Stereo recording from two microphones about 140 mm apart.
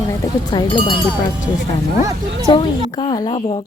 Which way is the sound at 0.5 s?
35° left (ahead or behind).